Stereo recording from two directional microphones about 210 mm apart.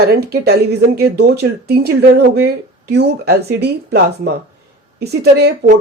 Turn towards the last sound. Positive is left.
turn(degrees=-50)  # may be behind; listen again after turning